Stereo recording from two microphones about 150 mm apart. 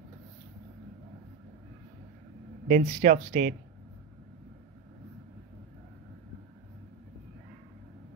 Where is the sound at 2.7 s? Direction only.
65° right (ahead or behind).